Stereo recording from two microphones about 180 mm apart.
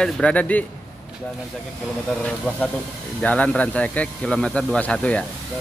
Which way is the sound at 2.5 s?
10° left (ahead or behind).